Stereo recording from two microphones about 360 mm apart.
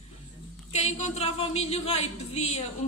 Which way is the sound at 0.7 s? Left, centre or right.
Centre.